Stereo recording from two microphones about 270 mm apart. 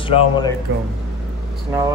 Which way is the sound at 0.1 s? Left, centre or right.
Left.